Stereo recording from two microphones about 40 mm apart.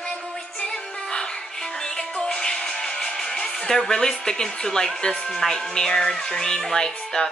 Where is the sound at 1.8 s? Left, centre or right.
Centre.